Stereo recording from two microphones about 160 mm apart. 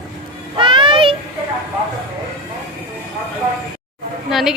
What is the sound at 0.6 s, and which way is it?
Speech, 30° right (ahead or behind).